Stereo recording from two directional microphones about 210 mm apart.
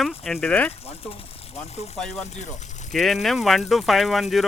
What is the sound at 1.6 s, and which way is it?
Speech, 30° left (ahead or behind).